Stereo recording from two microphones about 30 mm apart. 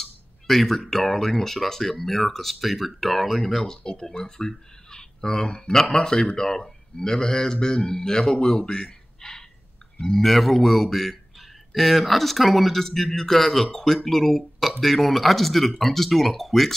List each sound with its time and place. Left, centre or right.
0.0 s a sound: centre
0.7 s speech: centre
10.1 s a man's voice: centre
12.8 s speech: centre